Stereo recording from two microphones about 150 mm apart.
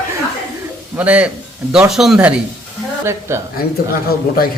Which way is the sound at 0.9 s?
10° right (ahead or behind).